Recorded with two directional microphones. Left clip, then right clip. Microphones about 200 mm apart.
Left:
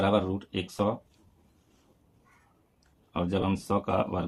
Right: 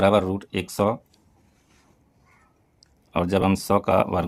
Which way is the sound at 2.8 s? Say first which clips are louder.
Right 8 dB; 45° right (ahead or behind).